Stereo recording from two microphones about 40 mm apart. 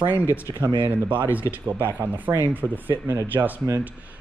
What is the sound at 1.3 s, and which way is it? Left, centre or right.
Speech, right.